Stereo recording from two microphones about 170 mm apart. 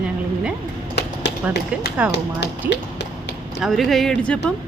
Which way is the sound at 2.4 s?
90° left.